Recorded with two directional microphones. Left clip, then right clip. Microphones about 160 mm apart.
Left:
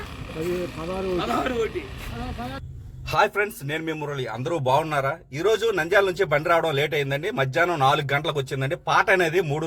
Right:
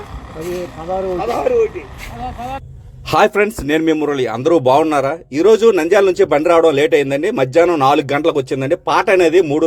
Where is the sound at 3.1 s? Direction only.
55° right (ahead or behind).